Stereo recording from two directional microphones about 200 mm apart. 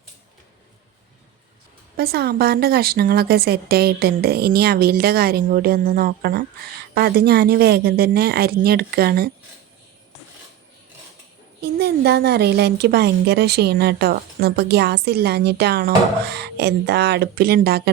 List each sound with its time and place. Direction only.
2.0 s a woman's voice: 50° right (ahead or behind)
11.6 s a woman's voice: 55° right (ahead or behind)